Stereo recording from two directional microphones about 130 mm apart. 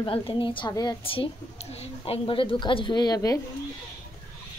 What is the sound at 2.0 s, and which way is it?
Speech, 40° left (ahead or behind).